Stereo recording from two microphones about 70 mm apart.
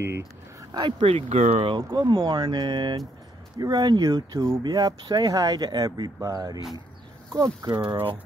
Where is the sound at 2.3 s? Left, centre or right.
Right.